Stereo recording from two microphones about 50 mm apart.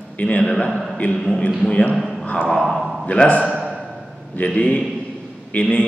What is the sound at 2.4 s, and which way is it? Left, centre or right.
Speech, centre.